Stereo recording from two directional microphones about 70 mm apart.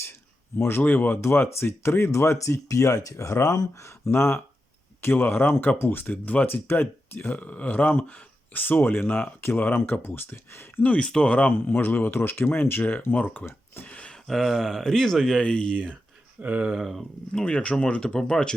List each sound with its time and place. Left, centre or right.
0.0 s speech: left
4.1 s speech: left
10.9 s speech: centre
13.8 s a sound: centre
14.3 s speech: centre
15.4 s speech: centre
16.4 s speech: right
16.7 s speech: centre
17.3 s speech: centre